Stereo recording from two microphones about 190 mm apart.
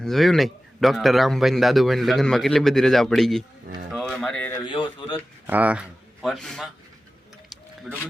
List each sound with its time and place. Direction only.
0.0 s a man's voice: centre (ahead or behind)
3.9 s music: centre (ahead or behind)
4.6 s speech: 25° left (ahead or behind)
5.5 s speech: 10° right (ahead or behind)
7.9 s a man's voice: 5° right (ahead or behind)